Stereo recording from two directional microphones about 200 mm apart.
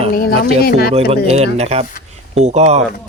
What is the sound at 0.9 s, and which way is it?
Speech, 30° right (ahead or behind).